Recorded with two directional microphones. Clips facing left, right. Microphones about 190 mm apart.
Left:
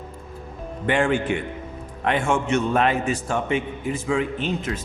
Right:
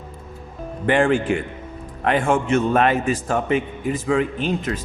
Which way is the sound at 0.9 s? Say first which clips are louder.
Right 3 dB; 50° right (ahead or behind).